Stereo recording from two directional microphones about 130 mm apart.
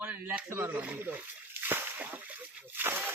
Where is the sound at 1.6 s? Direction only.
15° right (ahead or behind).